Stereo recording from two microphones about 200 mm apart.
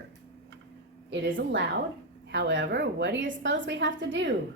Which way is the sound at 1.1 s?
65° right (ahead or behind).